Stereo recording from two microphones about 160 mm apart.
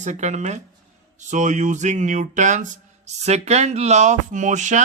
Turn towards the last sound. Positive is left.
turn(degrees=-50)  # may be behind; listen again after turning